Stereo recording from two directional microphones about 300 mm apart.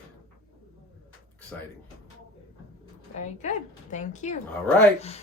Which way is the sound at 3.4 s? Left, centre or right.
Left.